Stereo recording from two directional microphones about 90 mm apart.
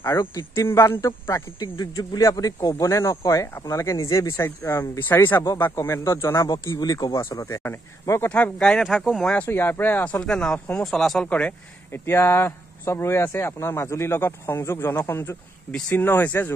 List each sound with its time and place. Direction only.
0.3 s speech: 30° left (ahead or behind)
1.6 s speech: 45° left (ahead or behind)
6.5 s a man's voice: 45° left (ahead or behind)
7.2 s speech: 30° left (ahead or behind)
8.2 s speech: 20° left (ahead or behind)
8.8 s speech: 5° right (ahead or behind)
9.2 s speech: 10° left (ahead or behind)
9.5 s speech: 25° left (ahead or behind)
10.2 s speech: 10° left (ahead or behind)
11.9 s speech: 25° left (ahead or behind)